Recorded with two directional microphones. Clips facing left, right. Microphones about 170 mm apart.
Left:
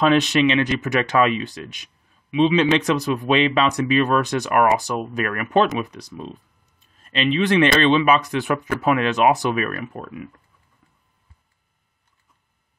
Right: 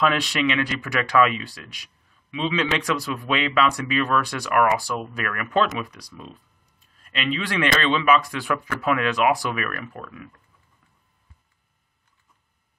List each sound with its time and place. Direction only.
0.2 s speech: 25° left (ahead or behind)